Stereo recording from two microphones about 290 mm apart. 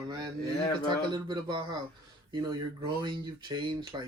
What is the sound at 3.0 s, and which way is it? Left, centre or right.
Speech, centre.